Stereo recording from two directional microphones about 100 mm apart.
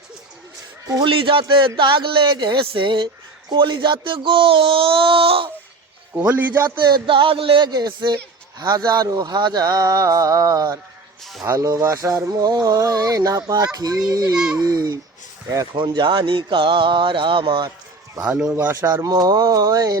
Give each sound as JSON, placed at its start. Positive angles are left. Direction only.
{"t": 1.0, "sound": "speech", "side_deg": -60}
{"t": 6.1, "sound": "a man's voice", "side_deg": -15}
{"t": 6.7, "sound": "speech", "side_deg": -50}
{"t": 7.7, "sound": "speech", "side_deg": -45}
{"t": 12.3, "sound": "a sound", "side_deg": -45}
{"t": 12.6, "sound": "speech", "side_deg": -40}
{"t": 15.7, "sound": "speech", "side_deg": -50}
{"t": 18.2, "sound": "a man's voice", "side_deg": -10}
{"t": 18.5, "sound": "a man's voice", "side_deg": -25}
{"t": 19.0, "sound": "speech", "side_deg": -40}